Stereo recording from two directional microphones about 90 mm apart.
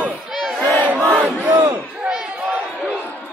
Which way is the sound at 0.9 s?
15° left (ahead or behind).